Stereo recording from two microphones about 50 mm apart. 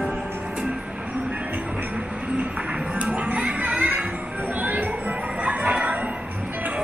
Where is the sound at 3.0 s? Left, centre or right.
Right.